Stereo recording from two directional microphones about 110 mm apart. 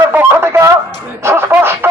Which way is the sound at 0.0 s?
20° right (ahead or behind).